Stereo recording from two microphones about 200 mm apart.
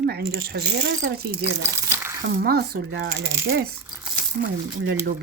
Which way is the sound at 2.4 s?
50° right (ahead or behind).